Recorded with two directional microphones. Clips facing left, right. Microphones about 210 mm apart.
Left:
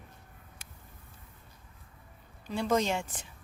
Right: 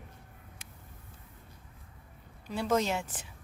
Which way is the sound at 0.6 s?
15° right (ahead or behind).